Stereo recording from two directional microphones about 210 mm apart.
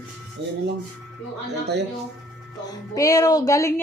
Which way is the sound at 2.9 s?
15° left (ahead or behind).